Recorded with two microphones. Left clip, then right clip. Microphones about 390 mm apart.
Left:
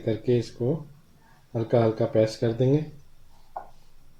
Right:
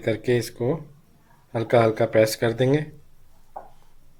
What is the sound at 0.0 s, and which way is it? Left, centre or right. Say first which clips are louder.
Speech: right 2 dB; right.